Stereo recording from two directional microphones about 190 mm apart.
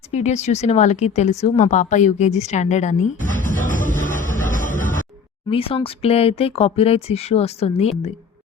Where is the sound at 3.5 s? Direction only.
45° left (ahead or behind).